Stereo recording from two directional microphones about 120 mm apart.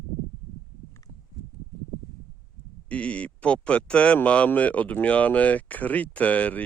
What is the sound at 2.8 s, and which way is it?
Speech, 10° left (ahead or behind).